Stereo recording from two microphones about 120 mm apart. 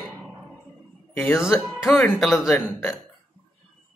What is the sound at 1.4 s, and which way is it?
Speech, 5° right (ahead or behind).